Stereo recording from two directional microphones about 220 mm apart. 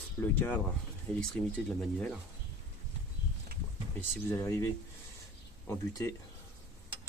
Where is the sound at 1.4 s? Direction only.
10° left (ahead or behind).